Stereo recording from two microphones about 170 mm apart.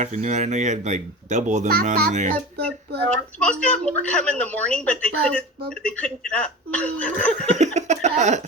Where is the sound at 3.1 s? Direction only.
5° left (ahead or behind).